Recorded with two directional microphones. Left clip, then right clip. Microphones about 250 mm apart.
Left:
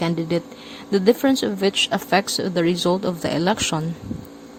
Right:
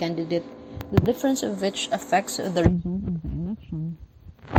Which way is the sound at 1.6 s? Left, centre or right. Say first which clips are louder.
Left 6 dB; left.